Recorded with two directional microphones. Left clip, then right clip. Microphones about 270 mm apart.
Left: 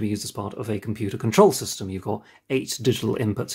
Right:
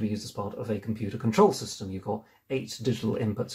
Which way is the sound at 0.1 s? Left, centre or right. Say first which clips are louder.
Left 4 dB; left.